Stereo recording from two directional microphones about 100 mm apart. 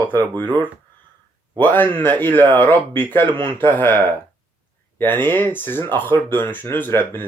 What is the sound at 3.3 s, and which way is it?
Speech, 55° right (ahead or behind).